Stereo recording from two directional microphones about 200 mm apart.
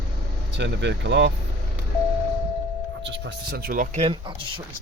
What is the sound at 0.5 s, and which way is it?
Speech, 60° right (ahead or behind).